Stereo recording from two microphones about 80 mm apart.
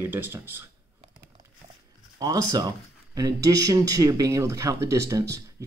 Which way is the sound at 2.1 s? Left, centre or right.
Right.